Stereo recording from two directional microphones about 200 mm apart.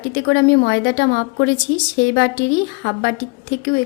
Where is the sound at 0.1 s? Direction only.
65° left (ahead or behind).